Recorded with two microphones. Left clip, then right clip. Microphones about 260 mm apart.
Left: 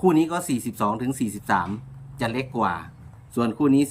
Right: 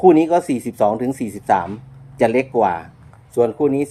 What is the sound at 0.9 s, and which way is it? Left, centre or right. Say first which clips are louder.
Speech: right 5 dB; centre.